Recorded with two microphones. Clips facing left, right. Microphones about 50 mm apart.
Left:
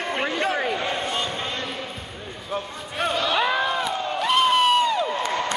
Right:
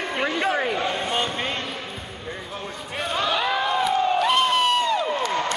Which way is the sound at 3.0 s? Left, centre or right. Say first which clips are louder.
Left 2 dB; centre.